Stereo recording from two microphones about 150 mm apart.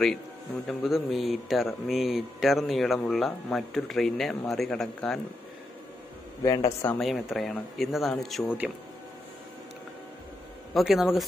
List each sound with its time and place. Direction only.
0.7 s speech: centre (ahead or behind)
6.4 s speech: 20° left (ahead or behind)
7.0 s speech: centre (ahead or behind)
10.7 s speech: centre (ahead or behind)